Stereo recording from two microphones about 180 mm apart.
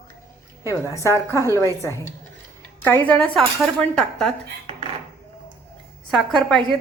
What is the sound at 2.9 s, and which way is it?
Speech, 10° left (ahead or behind).